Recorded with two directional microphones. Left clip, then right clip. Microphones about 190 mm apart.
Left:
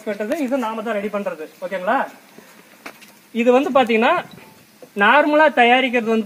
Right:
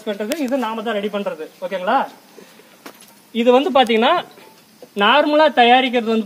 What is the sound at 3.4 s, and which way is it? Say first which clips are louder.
Speech: right 1 dB; 5° left (ahead or behind).